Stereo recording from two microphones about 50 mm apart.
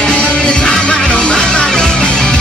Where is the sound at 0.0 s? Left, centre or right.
Centre.